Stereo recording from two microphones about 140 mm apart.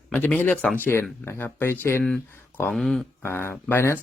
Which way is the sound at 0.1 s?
10° left (ahead or behind).